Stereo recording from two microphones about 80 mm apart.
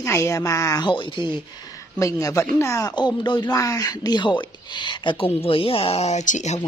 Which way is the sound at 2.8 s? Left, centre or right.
Left.